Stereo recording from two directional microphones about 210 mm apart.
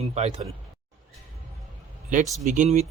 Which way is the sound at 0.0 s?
30° right (ahead or behind).